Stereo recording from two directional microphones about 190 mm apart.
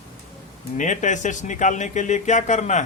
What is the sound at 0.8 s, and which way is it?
Speech, 40° left (ahead or behind).